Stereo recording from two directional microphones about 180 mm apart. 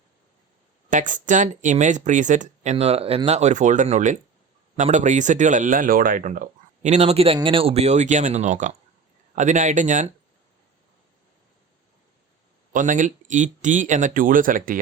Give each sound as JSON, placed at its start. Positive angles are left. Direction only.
{"t": 0.9, "sound": "speech", "side_deg": -45}
{"t": 12.7, "sound": "speech", "side_deg": -45}